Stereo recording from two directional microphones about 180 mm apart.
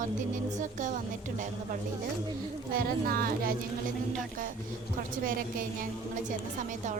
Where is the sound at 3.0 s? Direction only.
55° right (ahead or behind).